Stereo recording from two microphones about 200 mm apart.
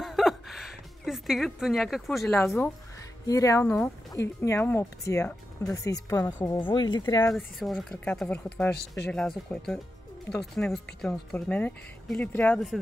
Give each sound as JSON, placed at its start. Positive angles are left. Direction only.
{"t": 0.0, "sound": "a sound", "side_deg": 0}
{"t": 2.3, "sound": "speech", "side_deg": 10}
{"t": 7.3, "sound": "speech", "side_deg": 0}
{"t": 8.7, "sound": "speech", "side_deg": 60}
{"t": 9.5, "sound": "speech", "side_deg": 10}